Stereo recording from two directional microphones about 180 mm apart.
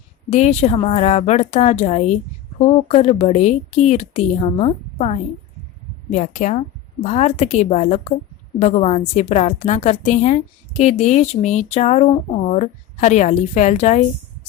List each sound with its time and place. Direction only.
0.3 s a woman's voice: 40° left (ahead or behind)